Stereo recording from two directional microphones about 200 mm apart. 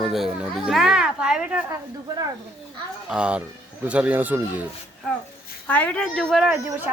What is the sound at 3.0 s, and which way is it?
Speech, 5° right (ahead or behind).